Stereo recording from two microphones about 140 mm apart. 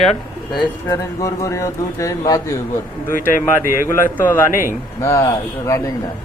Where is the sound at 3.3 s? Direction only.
70° left (ahead or behind).